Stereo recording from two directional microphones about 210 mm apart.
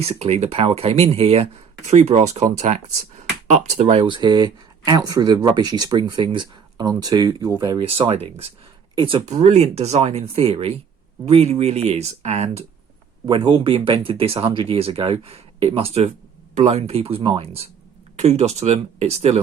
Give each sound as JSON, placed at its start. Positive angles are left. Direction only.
{"t": 0.0, "sound": "speech", "side_deg": -30}